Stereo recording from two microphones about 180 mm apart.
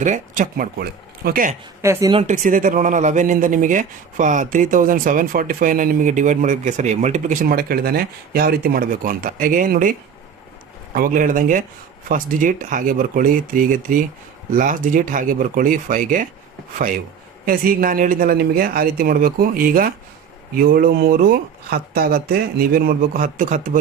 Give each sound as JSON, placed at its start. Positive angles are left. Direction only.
{"t": 0.0, "sound": "speech", "side_deg": -45}
{"t": 1.8, "sound": "speech", "side_deg": -15}
{"t": 2.1, "sound": "speech", "side_deg": -45}
{"t": 10.9, "sound": "speech", "side_deg": -50}